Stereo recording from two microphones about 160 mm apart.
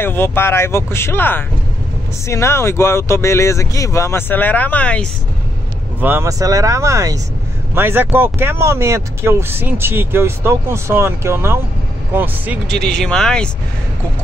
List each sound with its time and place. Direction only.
0.0 s speech: 15° left (ahead or behind)
5.9 s speech: 15° right (ahead or behind)
12.6 s speech: centre (ahead or behind)